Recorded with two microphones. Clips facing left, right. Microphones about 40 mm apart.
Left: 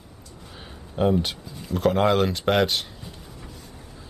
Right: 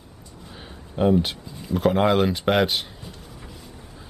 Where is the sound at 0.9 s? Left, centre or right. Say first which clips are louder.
Right 2 dB; centre.